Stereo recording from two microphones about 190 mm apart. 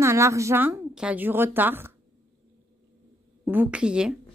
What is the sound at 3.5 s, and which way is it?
Speech, 10° right (ahead or behind).